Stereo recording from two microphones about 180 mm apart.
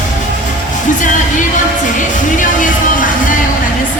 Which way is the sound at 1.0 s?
45° left (ahead or behind).